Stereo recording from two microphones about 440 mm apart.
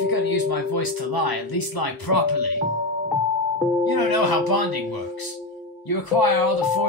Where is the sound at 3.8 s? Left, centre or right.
Left.